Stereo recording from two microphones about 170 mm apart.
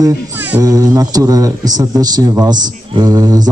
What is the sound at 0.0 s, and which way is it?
Speech, 15° right (ahead or behind).